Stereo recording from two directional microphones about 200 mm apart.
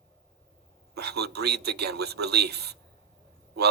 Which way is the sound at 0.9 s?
55° right (ahead or behind).